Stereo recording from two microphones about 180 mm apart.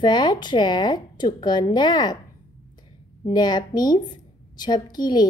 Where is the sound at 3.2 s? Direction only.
25° left (ahead or behind).